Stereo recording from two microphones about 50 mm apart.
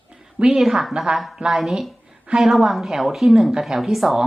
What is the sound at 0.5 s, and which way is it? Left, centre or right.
Speech, centre.